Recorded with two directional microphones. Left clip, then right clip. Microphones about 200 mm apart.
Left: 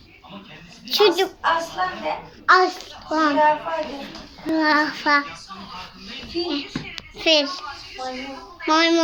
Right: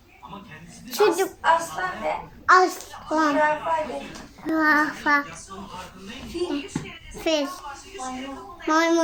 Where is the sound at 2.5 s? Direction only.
10° right (ahead or behind).